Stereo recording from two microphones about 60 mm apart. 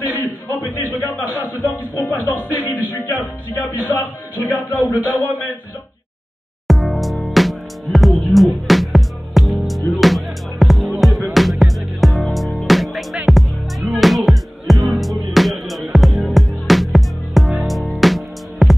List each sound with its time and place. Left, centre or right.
0.1 s a man's voice: left
3.8 s a man's voice: left
6.7 s music: centre